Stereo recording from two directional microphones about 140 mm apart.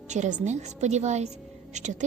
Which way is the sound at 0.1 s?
60° right (ahead or behind).